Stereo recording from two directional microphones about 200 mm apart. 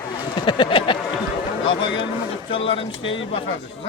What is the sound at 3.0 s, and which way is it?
Speech, 70° left (ahead or behind).